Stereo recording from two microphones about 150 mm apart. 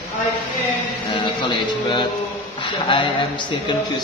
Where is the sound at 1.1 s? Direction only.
30° left (ahead or behind).